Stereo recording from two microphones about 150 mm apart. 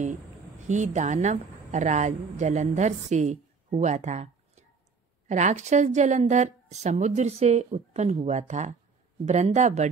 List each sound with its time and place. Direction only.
0.7 s a woman's voice: 55° right (ahead or behind)